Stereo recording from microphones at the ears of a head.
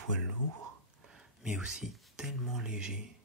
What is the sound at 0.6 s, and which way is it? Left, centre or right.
Whispering, right.